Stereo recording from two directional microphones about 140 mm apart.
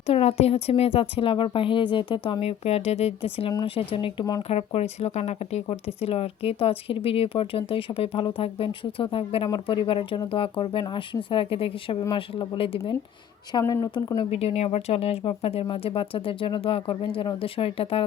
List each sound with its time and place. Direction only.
0.1 s a woman's voice: 50° left (ahead or behind); by 4.4 s 30° left (ahead or behind)
4.4 s speech: 50° left (ahead or behind)
13.5 s speech: 25° left (ahead or behind)
14.3 s a woman's voice: 45° left (ahead or behind)